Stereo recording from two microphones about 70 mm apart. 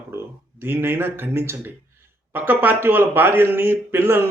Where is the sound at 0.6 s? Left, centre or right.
Right.